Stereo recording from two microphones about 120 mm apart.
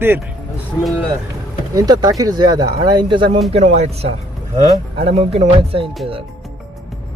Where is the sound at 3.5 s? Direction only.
65° right (ahead or behind).